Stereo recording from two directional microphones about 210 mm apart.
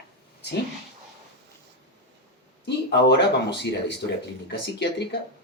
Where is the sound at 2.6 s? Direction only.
55° left (ahead or behind).